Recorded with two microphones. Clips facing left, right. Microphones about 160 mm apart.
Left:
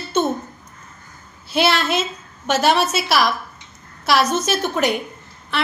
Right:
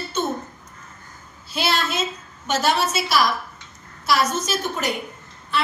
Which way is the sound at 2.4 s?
70° left (ahead or behind).